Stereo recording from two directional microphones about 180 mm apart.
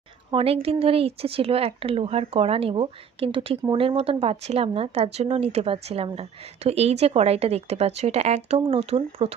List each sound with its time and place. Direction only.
0.3 s speech: 30° right (ahead or behind)